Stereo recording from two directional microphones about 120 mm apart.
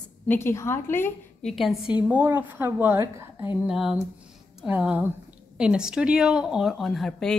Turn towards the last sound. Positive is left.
turn(degrees=5)  # may be behind; listen again after turning